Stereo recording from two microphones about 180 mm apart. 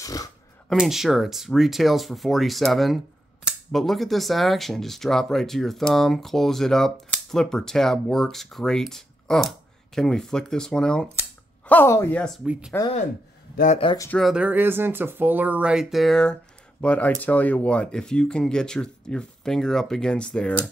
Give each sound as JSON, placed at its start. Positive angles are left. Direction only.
{"t": 0.0, "sound": "a sound", "side_deg": 20}
{"t": 0.7, "sound": "speech", "side_deg": 0}
{"t": 12.4, "sound": "speech", "side_deg": -5}
{"t": 14.1, "sound": "speech", "side_deg": -5}